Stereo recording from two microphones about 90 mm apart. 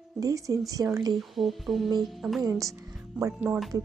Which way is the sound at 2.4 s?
40° right (ahead or behind).